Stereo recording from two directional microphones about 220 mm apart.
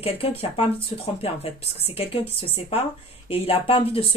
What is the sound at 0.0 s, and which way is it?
Speech, 25° left (ahead or behind).